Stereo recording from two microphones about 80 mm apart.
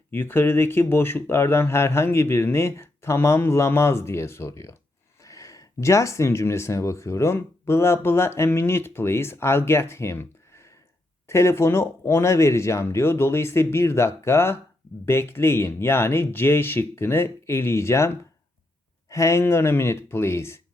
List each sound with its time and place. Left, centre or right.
0.1 s speech: left